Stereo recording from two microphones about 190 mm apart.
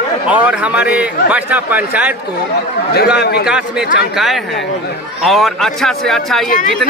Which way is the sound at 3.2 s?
60° left (ahead or behind).